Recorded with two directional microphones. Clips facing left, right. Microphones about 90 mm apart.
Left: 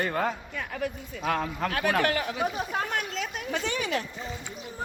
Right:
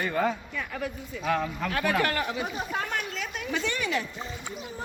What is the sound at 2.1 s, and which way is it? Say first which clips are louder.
Speech: even; 60° right (ahead or behind).